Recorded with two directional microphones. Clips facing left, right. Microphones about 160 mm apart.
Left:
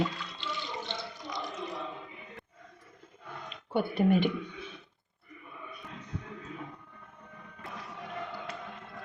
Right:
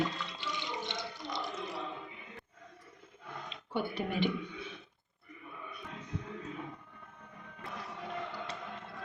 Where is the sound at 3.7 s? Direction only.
50° left (ahead or behind).